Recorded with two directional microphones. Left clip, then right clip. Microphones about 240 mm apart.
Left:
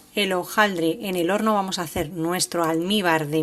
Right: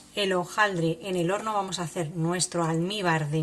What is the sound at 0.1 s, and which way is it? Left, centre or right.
A woman's voice, left.